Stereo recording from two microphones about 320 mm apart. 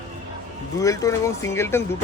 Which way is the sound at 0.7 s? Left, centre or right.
Centre.